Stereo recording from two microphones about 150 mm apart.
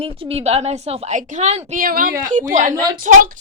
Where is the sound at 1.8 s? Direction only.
75° right (ahead or behind).